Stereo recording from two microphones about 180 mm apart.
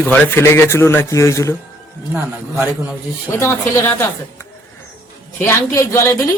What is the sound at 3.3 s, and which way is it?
Speech, 15° left (ahead or behind).